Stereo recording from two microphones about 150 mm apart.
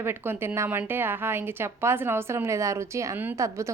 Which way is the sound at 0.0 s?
15° right (ahead or behind).